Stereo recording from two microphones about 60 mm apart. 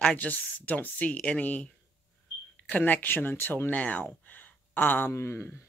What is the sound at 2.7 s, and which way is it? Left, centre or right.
Speech, left.